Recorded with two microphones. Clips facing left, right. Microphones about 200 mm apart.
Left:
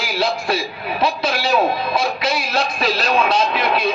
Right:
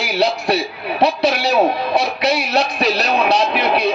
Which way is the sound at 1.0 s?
70° right (ahead or behind).